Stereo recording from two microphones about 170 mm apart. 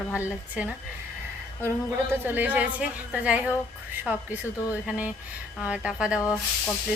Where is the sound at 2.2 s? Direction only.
10° right (ahead or behind).